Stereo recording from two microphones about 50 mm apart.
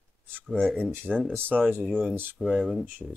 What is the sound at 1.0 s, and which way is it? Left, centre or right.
Speech, left.